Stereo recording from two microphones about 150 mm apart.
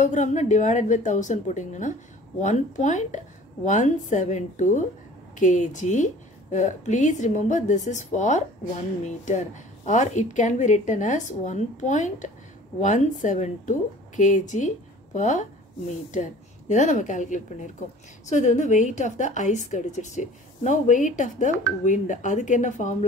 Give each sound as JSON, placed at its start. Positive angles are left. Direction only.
{"t": 0.0, "sound": "a woman's voice", "side_deg": 55}